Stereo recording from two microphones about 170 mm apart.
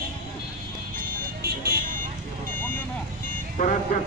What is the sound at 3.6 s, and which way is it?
Speech, 50° left (ahead or behind).